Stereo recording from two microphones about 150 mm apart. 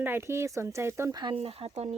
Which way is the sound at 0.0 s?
15° right (ahead or behind).